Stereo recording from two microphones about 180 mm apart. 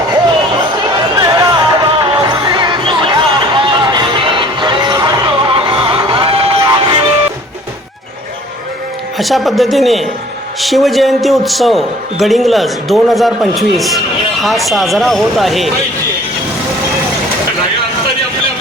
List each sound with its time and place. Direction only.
1.1 s music: 20° right (ahead or behind)
9.1 s a man's voice: centre (ahead or behind)